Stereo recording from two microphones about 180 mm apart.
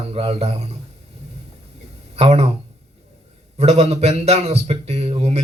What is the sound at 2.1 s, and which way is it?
Speech, 35° right (ahead or behind).